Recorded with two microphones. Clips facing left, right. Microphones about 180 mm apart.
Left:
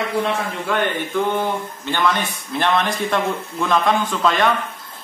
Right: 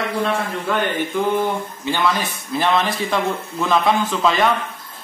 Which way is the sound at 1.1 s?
10° right (ahead or behind).